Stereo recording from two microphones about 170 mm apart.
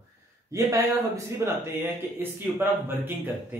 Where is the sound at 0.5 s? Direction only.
20° right (ahead or behind).